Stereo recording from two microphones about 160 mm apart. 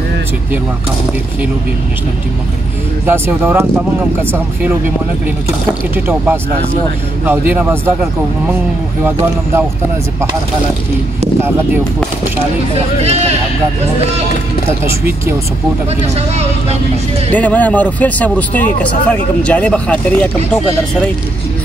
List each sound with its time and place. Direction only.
3.1 s speech: 15° right (ahead or behind)
5.9 s speech: 10° right (ahead or behind)
12.7 s speech: 40° right (ahead or behind)
16.2 s speech: 40° right (ahead or behind)
17.3 s speech: 10° left (ahead or behind)